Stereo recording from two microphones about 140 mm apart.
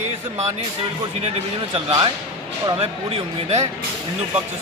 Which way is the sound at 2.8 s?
50° right (ahead or behind).